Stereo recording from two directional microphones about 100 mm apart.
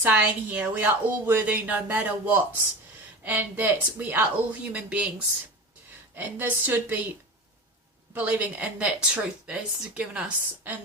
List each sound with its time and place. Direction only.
0.0 s speech: 15° right (ahead or behind)
6.1 s speech: 20° right (ahead or behind)
8.1 s speech: 15° right (ahead or behind)